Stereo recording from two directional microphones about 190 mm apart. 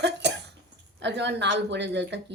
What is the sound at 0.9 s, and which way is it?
Speech, 65° right (ahead or behind).